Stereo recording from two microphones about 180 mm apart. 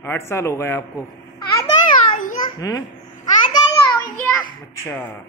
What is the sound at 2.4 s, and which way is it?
Babbling, 20° left (ahead or behind).